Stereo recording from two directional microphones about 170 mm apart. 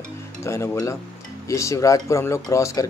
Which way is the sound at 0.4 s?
15° left (ahead or behind).